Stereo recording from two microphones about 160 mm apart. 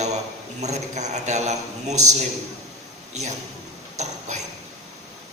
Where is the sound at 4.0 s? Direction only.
45° right (ahead or behind).